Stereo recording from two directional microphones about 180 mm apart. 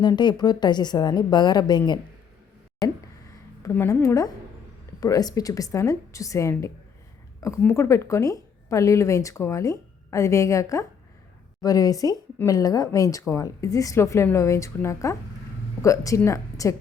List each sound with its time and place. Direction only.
0.0 s a woman's voice: 25° left (ahead or behind)
3.6 s a woman's voice: 15° left (ahead or behind)